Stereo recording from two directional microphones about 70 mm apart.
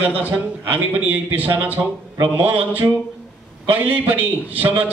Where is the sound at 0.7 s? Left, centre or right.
Right.